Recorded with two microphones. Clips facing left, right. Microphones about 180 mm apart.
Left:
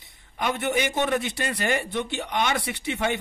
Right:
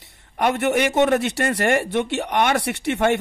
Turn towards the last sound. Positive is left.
turn(degrees=-65)  # may be behind; listen again after turning